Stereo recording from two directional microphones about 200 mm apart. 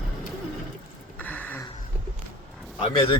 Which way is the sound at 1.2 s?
10° left (ahead or behind).